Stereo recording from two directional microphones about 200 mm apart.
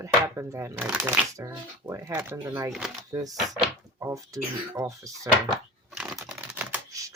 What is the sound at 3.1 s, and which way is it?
Speech, 20° right (ahead or behind).